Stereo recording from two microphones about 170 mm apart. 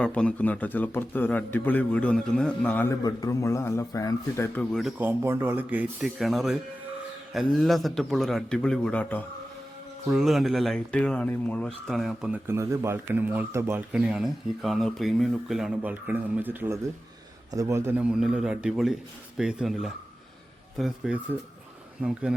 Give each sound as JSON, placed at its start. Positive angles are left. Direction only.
{"t": 0.0, "sound": "a man's voice", "side_deg": 5}
{"t": 3.0, "sound": "a man's voice", "side_deg": 20}
{"t": 4.7, "sound": "speech", "side_deg": 0}